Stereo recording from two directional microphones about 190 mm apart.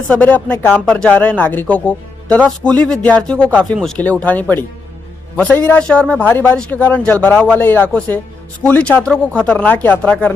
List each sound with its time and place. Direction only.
0.1 s a man's voice: 10° left (ahead or behind)